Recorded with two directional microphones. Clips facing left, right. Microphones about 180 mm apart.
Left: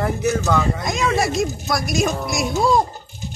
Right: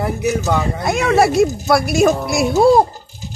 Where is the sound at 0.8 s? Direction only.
60° right (ahead or behind).